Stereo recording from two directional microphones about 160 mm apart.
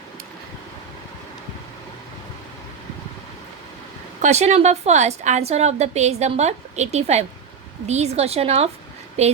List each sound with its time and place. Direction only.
4.2 s a woman's voice: 45° right (ahead or behind)